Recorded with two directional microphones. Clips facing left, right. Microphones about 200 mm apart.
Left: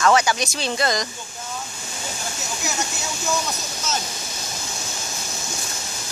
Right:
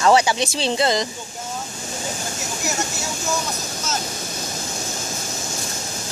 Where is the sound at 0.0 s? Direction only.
30° right (ahead or behind).